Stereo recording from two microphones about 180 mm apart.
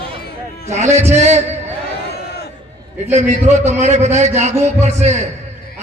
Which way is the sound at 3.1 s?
40° right (ahead or behind).